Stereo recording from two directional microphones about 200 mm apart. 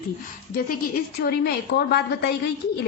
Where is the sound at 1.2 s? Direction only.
55° left (ahead or behind).